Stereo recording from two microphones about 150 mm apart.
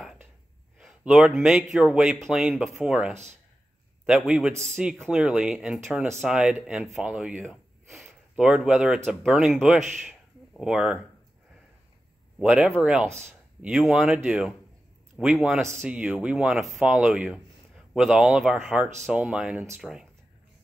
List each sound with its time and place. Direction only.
0.7 s a man's voice: 5° right (ahead or behind)
9.9 s a sound: centre (ahead or behind)
12.4 s speech: 5° right (ahead or behind)
15.8 s speech: 10° right (ahead or behind)